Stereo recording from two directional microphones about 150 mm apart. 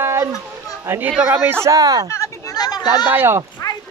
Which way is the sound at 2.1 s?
25° left (ahead or behind).